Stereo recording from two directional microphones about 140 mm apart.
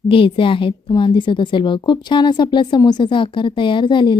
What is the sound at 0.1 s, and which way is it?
A woman's voice, 40° left (ahead or behind).